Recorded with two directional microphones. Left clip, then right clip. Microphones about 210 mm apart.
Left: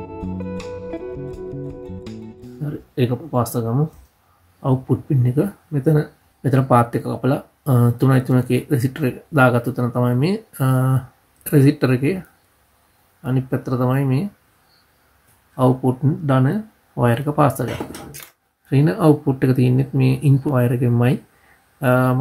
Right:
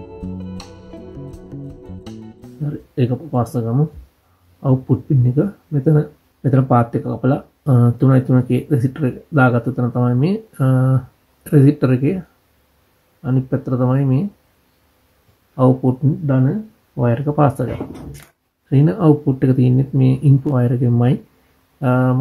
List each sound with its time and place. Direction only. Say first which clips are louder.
2.6 s speech: right 1 dB; centre (ahead or behind)
13.2 s speech: right 2 dB; centre (ahead or behind)
15.5 s speech: right 2 dB; centre (ahead or behind)
16.3 s speech: left 2 dB; 20° left (ahead or behind)
17.1 s speech: right 2 dB; 5° left (ahead or behind)
18.7 s speech: right 1 dB; 5° left (ahead or behind)